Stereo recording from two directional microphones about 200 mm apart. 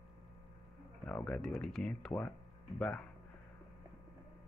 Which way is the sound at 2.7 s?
5° left (ahead or behind).